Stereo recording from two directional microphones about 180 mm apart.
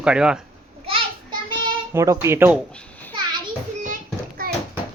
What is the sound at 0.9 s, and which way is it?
Child singing, 30° right (ahead or behind).